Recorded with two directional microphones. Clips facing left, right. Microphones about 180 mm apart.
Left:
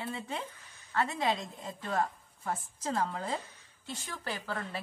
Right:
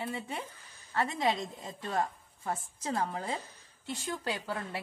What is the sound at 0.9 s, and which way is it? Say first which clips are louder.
A woman's voice: right 1 dB; 20° right (ahead or behind).